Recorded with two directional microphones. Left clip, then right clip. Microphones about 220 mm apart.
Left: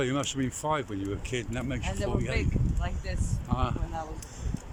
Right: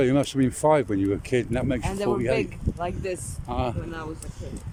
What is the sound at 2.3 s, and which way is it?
Speech, 55° right (ahead or behind).